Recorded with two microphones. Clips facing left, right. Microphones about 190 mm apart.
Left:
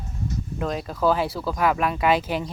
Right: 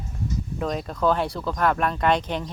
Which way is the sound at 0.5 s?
Centre (ahead or behind).